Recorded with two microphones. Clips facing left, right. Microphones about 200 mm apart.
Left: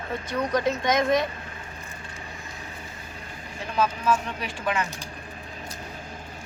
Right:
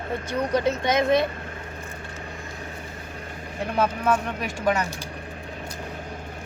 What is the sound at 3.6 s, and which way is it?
Speech, 60° right (ahead or behind).